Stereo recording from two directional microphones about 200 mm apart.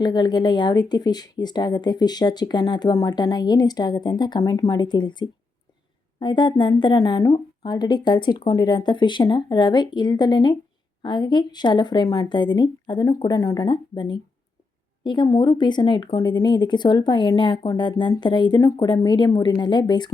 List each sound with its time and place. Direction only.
0.0 s a woman's voice: 20° left (ahead or behind)